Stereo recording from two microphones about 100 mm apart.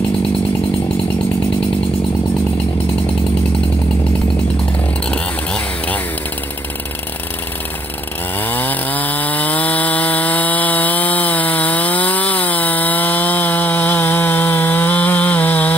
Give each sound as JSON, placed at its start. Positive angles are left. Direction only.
{"t": 5.1, "sound": "vehicle", "side_deg": 10}
{"t": 8.4, "sound": "chainsaw", "side_deg": 20}